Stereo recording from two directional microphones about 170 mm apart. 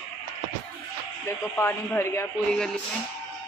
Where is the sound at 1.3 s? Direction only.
15° left (ahead or behind).